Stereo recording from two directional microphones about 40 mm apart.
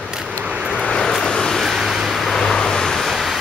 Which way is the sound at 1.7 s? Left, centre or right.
Centre.